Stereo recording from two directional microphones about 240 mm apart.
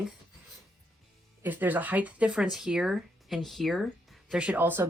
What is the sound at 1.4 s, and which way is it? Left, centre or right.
Speech, centre.